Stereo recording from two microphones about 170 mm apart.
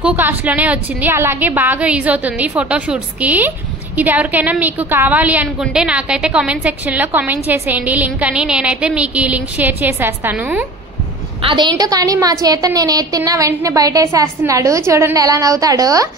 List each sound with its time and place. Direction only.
0.0 s a woman's voice: 10° right (ahead or behind)
11.4 s a woman's voice: 25° right (ahead or behind)